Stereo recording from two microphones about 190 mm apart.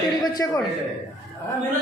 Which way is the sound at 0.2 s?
20° left (ahead or behind).